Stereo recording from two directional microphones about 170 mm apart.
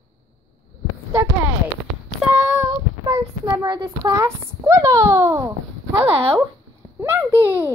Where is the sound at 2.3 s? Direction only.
10° right (ahead or behind).